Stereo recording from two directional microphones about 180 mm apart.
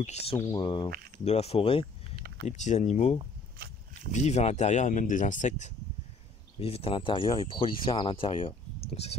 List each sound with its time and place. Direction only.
0.0 s speech: 35° left (ahead or behind)
0.8 s speech: 60° right (ahead or behind)
1.2 s speech: 35° left (ahead or behind)
2.1 s a sound: 60° right (ahead or behind)
2.4 s speech: 40° left (ahead or behind)
3.5 s a sound: 60° right (ahead or behind)
4.1 s speech: 40° left (ahead or behind)
6.6 s speech: 30° left (ahead or behind)